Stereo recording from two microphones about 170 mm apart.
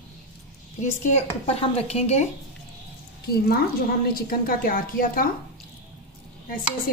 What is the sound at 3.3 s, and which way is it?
A woman's voice, 60° left (ahead or behind).